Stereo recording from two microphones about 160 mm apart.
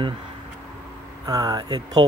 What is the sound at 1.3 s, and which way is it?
Speech, 25° right (ahead or behind).